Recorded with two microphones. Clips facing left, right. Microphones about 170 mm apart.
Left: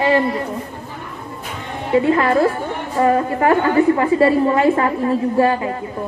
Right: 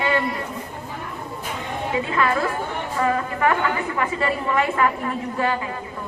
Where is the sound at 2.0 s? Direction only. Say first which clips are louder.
Left 7 dB; 30° left (ahead or behind).